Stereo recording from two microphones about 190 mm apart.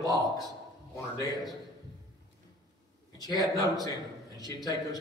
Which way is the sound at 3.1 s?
20° left (ahead or behind).